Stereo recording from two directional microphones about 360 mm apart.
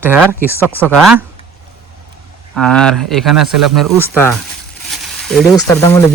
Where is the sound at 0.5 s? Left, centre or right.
Centre.